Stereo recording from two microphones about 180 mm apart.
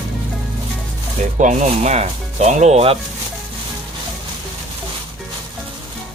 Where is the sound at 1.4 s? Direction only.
40° right (ahead or behind).